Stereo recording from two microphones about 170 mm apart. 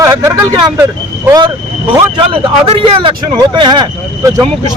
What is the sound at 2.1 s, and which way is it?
Speech, 30° right (ahead or behind).